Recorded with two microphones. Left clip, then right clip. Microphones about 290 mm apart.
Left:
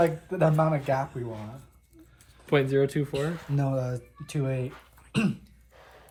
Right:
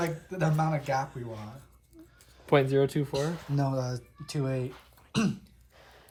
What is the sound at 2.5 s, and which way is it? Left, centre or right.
Speech, right.